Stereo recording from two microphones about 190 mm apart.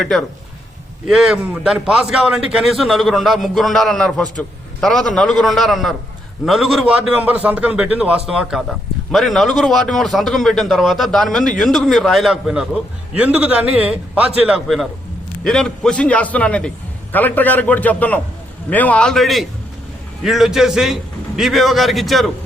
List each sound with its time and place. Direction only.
0.0 s a man's voice: centre (ahead or behind)